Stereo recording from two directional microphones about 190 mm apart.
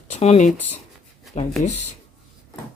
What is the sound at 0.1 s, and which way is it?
Speech, 35° left (ahead or behind).